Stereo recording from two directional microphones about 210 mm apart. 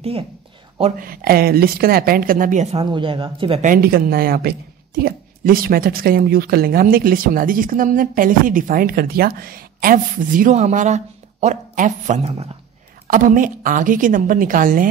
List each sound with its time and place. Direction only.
0.9 s speech: 45° right (ahead or behind); by 3.6 s 25° right (ahead or behind)
3.6 s a woman's voice: 45° right (ahead or behind)